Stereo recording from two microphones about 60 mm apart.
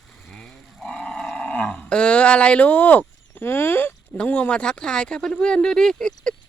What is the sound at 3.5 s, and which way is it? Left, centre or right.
Speech, left.